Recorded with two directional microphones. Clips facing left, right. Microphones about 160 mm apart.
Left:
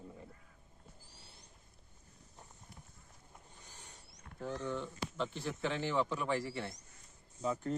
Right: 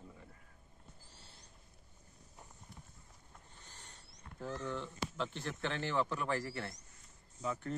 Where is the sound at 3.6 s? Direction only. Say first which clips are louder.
Even; 10° left (ahead or behind).